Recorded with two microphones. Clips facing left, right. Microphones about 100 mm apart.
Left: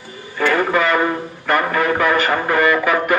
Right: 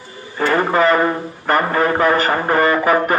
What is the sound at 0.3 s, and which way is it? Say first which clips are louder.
A man's voice: right 1 dB; 35° right (ahead or behind).